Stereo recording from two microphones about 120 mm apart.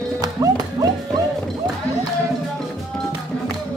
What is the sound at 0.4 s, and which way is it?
Music, 30° right (ahead or behind).